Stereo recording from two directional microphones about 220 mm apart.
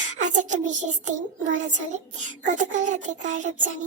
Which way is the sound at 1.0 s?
35° right (ahead or behind).